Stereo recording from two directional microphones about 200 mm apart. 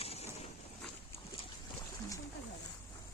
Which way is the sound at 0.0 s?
30° left (ahead or behind).